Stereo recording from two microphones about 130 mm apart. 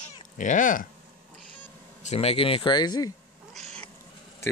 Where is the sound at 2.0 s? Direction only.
55° left (ahead or behind); by 3.1 s 35° left (ahead or behind).